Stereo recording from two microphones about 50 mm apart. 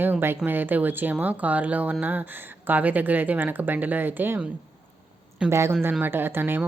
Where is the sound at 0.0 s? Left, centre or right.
Right.